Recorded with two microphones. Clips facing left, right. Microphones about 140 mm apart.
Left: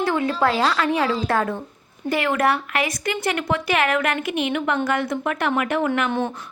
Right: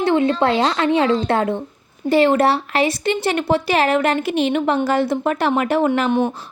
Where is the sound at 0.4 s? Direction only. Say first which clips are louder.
Right 3 dB; 30° right (ahead or behind).